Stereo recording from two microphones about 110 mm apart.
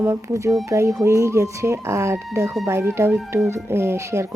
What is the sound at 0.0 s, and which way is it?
Speech, 25° right (ahead or behind).